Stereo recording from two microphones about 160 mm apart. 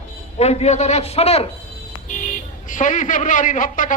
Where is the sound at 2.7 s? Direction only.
50° left (ahead or behind).